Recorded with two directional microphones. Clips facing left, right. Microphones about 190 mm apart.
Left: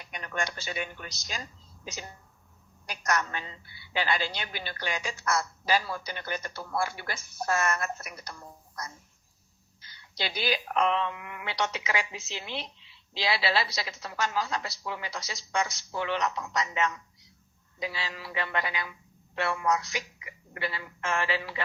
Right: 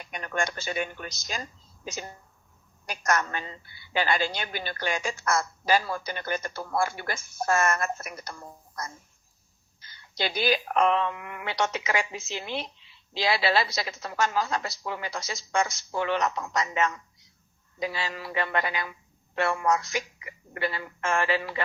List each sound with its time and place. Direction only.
0.0 s a woman's voice: 50° right (ahead or behind)